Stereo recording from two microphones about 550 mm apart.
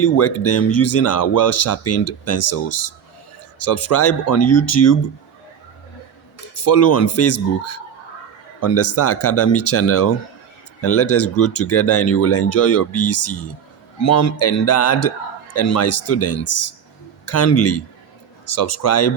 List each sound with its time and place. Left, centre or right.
0.0 s speech: left
6.5 s speech: left